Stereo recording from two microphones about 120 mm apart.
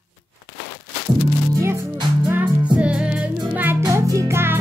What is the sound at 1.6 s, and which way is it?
Music, 20° right (ahead or behind).